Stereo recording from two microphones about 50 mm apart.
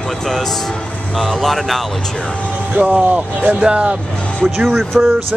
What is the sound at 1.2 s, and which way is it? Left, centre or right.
Speech, centre.